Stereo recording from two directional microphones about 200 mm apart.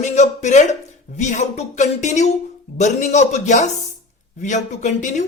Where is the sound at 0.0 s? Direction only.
35° left (ahead or behind).